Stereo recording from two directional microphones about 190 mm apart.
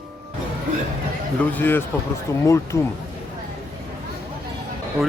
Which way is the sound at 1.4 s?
10° left (ahead or behind).